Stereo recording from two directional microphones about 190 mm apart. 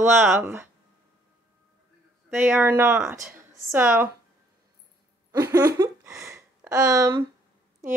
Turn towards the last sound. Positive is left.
turn(degrees=-15)  # may be behind; listen again after turning